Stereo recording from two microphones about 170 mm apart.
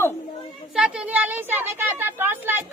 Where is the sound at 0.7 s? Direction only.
5° right (ahead or behind).